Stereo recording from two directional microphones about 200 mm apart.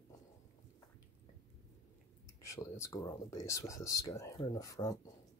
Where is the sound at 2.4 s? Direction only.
15° left (ahead or behind).